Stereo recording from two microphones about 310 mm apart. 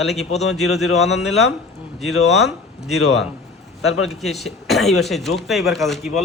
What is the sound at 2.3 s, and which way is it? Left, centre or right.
Speech, centre.